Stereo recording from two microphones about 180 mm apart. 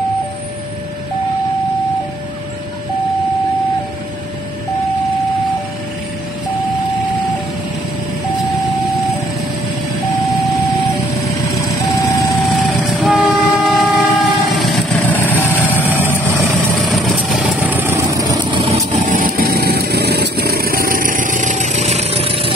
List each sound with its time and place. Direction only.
10.2 s vehicle: centre (ahead or behind)
11.8 s vehicle: 15° left (ahead or behind)
12.4 s train: centre (ahead or behind)
15.1 s vehicle: 10° left (ahead or behind)
17.2 s vehicle: 5° right (ahead or behind)
18.9 s lawn mower: 45° right (ahead or behind)